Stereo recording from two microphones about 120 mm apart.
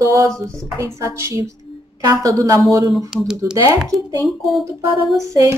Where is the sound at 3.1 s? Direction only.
5° right (ahead or behind).